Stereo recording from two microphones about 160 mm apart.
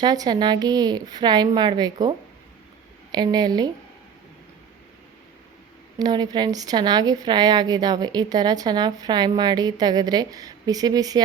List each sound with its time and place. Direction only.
0.0 s a woman's voice: 25° right (ahead or behind)
6.0 s a woman's voice: 25° right (ahead or behind)